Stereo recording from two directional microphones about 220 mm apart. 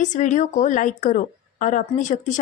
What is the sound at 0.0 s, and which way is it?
A woman's voice, 35° left (ahead or behind).